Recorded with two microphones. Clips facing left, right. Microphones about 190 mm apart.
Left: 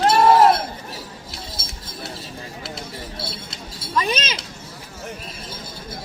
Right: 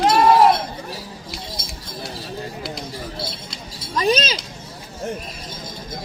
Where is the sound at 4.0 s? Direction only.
35° right (ahead or behind).